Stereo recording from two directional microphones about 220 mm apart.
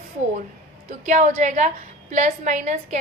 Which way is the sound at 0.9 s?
35° right (ahead or behind).